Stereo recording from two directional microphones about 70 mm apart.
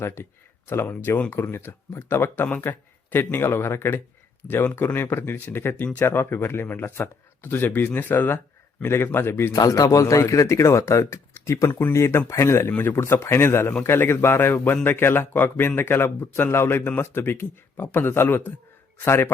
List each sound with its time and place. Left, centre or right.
0.0 s speech: left
9.5 s speech: left
12.7 s speech: left
13.0 s speech: left